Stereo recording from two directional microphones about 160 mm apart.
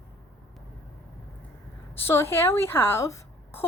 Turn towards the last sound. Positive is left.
turn(degrees=15)  # may be behind; listen again after turning